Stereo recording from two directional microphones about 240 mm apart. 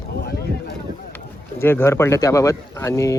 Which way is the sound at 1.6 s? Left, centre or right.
Centre.